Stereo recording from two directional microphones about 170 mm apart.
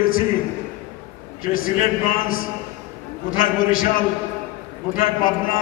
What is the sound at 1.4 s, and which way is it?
A man's voice, 55° left (ahead or behind).